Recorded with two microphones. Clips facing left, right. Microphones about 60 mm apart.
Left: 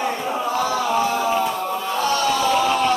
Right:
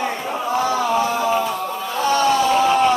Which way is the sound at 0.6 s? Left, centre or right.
Centre.